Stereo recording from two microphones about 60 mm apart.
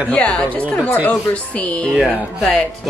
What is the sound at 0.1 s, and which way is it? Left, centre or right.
Speech, centre.